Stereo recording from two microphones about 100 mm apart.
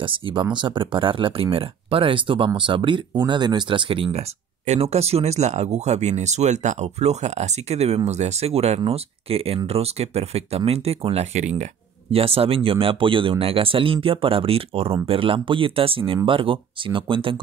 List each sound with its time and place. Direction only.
0.0 s speech: 60° right (ahead or behind); by 4.3 s 75° right (ahead or behind)
4.7 s speech: 90° right
9.7 s speech: 90° right
15.0 s speech: 65° right (ahead or behind)